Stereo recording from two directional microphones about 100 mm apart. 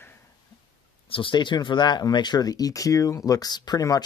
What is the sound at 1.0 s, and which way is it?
Speech, 60° left (ahead or behind).